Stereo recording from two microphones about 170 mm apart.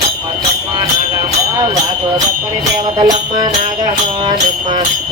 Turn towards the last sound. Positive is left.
turn(degrees=-25)  # may be behind; listen again after turning